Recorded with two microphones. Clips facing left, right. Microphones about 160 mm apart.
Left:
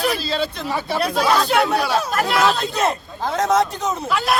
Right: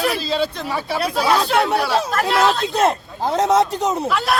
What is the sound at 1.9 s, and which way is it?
Speech, 30° right (ahead or behind).